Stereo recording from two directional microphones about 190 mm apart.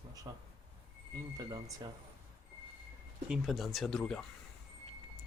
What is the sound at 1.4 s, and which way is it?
Speech, 20° right (ahead or behind).